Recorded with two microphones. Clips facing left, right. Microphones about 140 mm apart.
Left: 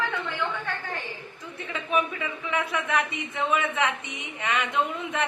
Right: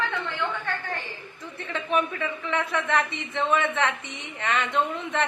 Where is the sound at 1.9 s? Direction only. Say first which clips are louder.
Right 1 dB; 10° left (ahead or behind).